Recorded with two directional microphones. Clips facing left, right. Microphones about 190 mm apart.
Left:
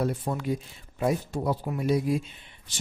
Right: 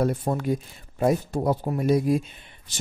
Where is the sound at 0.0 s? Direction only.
45° right (ahead or behind).